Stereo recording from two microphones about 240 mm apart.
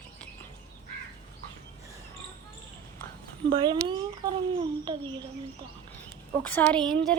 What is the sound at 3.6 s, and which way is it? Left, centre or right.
A child's voice, centre.